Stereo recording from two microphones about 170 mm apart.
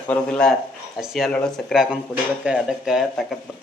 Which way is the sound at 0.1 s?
5° left (ahead or behind).